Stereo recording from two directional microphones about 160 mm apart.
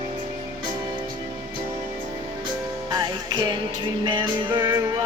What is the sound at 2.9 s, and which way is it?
Music, 25° right (ahead or behind).